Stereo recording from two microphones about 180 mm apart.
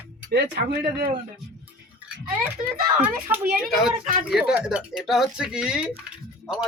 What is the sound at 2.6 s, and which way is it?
Speech, 20° left (ahead or behind).